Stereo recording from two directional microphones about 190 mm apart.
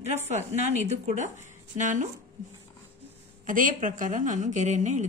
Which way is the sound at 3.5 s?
45° right (ahead or behind).